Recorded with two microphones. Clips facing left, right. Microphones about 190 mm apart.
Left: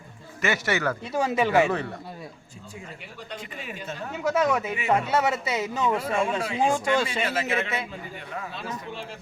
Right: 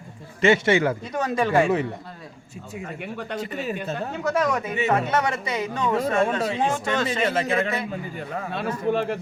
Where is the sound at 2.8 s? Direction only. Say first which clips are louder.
Right 9 dB; 60° right (ahead or behind).